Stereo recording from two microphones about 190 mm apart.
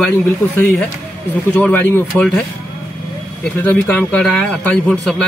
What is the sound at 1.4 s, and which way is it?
Speech, 10° left (ahead or behind).